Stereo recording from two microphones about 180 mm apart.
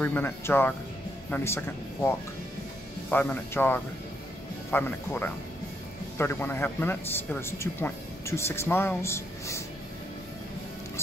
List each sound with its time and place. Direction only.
0.0 s speech: 10° left (ahead or behind)